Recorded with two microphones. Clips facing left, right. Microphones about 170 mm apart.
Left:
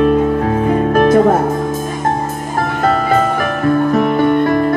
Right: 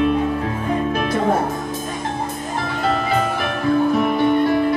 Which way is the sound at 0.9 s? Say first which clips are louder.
Left 11 dB; 50° left (ahead or behind).